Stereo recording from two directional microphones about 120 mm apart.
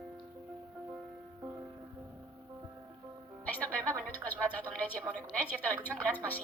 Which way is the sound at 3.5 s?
10° left (ahead or behind).